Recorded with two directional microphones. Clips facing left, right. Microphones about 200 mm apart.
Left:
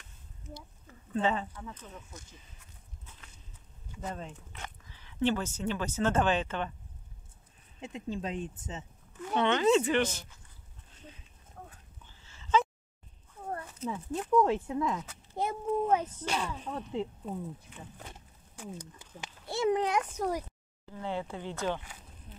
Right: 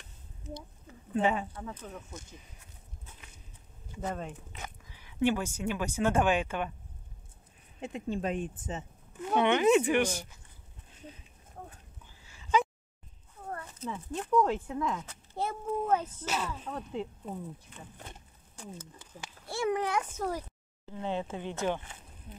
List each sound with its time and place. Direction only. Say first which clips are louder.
1.1 s speech: right 1 dB; 10° right (ahead or behind)
4.6 s speech: right 1 dB; 10° right (ahead or behind)
7.8 s speech: right 3 dB; 55° right (ahead or behind)
9.3 s speech: right 1 dB; 15° right (ahead or behind)
12.3 s a sound: even; 10° right (ahead or behind)
13.8 s speech: left 2 dB; 5° left (ahead or behind)
15.3 s a child's voice: left 2 dB; 15° left (ahead or behind)
16.3 s speech: even; 5° right (ahead or behind)
18.6 s a child's voice: left 2 dB; 15° left (ahead or behind)
20.8 s speech: right 2 dB; 20° right (ahead or behind)